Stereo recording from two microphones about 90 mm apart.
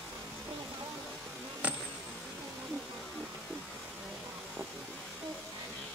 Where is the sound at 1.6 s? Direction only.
15° right (ahead or behind).